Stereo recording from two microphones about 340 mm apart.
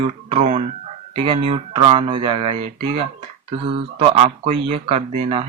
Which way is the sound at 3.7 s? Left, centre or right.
Centre.